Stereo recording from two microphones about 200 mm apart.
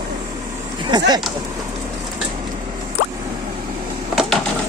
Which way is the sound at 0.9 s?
20° right (ahead or behind).